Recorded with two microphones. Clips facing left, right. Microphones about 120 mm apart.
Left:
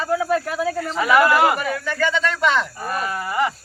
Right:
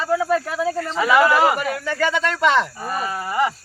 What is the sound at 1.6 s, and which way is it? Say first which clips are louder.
Speech: right 1 dB; 20° right (ahead or behind).